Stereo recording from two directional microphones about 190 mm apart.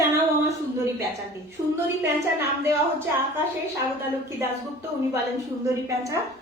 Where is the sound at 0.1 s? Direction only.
15° right (ahead or behind).